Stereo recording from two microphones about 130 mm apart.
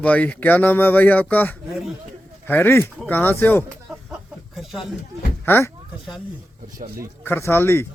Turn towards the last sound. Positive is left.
turn(degrees=20)  # may be behind; listen again after turning